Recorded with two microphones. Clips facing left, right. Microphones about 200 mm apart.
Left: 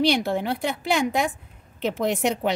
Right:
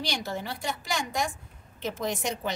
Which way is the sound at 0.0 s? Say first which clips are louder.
Left 11 dB; 60° left (ahead or behind).